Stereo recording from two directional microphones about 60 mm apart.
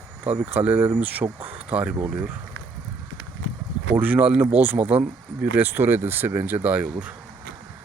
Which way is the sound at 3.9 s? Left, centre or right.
Right.